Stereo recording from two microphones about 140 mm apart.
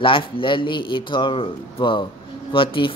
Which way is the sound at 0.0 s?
40° left (ahead or behind).